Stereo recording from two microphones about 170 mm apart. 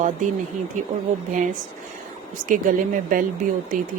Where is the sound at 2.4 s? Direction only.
50° right (ahead or behind).